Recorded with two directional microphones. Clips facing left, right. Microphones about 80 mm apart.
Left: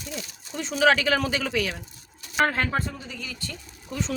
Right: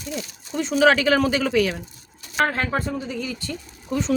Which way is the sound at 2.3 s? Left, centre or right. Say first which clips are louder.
Right 1 dB; centre.